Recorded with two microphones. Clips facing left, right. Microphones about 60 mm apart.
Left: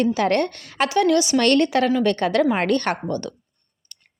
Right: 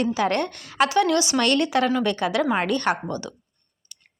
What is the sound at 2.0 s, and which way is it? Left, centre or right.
Speech, centre.